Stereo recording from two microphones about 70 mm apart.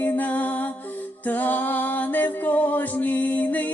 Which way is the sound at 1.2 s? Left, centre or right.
Left.